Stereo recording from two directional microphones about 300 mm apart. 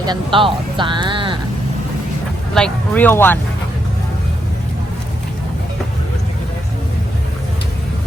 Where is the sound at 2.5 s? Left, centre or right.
Centre.